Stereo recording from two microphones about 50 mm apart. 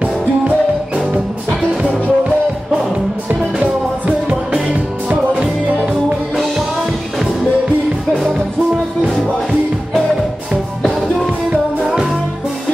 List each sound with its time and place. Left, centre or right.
1.5 s music: right
4.5 s music: right
11.5 s music: centre